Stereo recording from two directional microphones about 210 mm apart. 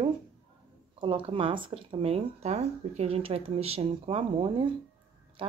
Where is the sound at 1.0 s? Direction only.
25° right (ahead or behind).